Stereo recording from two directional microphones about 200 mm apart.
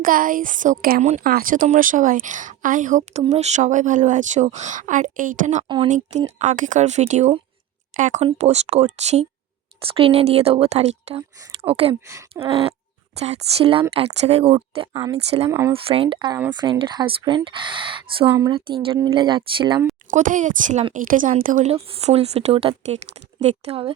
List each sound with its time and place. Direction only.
0.0 s a woman's voice: 45° right (ahead or behind)
5.6 s speech: 25° right (ahead or behind)
6.4 s speech: 40° right (ahead or behind)
14.9 s speech: 15° right (ahead or behind)
15.7 s speech: 30° right (ahead or behind)
20.1 s speech: 40° right (ahead or behind)